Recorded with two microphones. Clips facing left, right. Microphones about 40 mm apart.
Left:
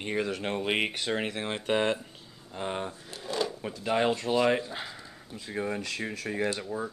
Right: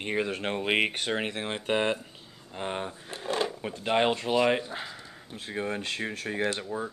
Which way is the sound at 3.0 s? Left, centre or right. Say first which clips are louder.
Right 4 dB; right.